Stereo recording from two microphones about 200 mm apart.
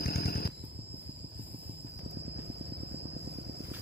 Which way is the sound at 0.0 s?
50° left (ahead or behind).